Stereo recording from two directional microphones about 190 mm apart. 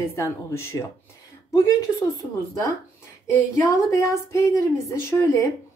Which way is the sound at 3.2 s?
15° left (ahead or behind).